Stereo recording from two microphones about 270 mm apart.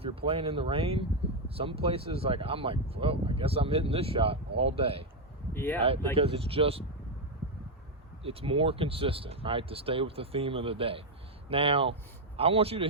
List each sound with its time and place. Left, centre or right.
0.0 s speech: right
5.5 s speech: centre
6.1 s speech: right
8.2 s speech: right